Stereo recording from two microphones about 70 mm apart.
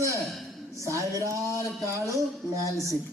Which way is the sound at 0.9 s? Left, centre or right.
Right.